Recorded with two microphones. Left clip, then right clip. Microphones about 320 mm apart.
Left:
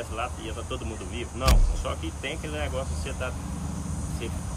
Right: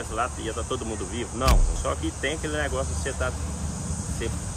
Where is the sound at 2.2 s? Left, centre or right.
Right.